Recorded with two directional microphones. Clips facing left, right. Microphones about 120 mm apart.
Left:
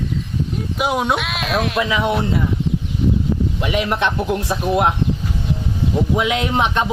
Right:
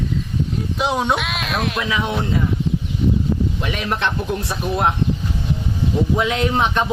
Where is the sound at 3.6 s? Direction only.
10° left (ahead or behind).